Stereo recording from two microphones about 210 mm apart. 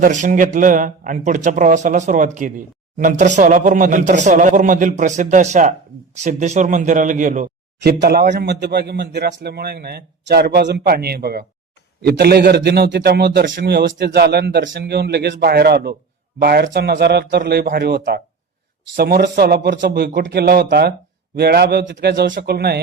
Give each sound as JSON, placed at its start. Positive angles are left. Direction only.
{"t": 0.0, "sound": "speech", "side_deg": -40}